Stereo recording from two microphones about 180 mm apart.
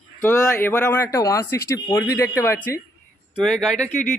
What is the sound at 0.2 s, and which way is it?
Speech, 10° left (ahead or behind).